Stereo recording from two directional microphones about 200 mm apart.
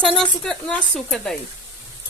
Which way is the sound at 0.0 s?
Centre (ahead or behind).